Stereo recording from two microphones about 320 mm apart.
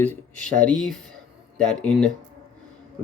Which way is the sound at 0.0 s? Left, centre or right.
Centre.